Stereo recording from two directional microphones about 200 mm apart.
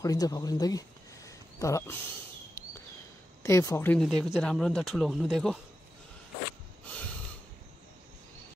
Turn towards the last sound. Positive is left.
turn(degrees=5)  # may be behind; listen again after turning